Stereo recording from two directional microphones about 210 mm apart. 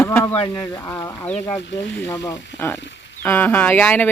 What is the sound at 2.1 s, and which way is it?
Speech, 15° left (ahead or behind).